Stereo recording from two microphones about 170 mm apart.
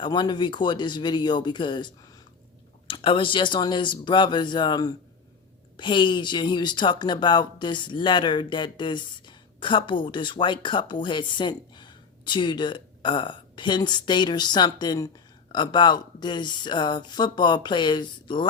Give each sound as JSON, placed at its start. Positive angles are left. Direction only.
{"t": 0.0, "sound": "speech", "side_deg": 25}